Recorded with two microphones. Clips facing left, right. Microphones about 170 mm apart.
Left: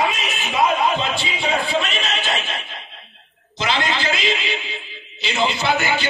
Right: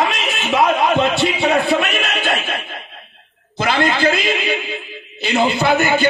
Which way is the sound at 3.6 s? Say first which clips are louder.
Right 5 dB; 55° right (ahead or behind).